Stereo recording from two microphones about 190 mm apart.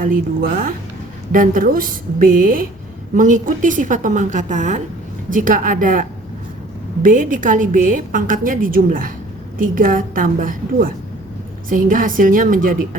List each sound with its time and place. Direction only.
0.0 s a woman's voice: 45° right (ahead or behind)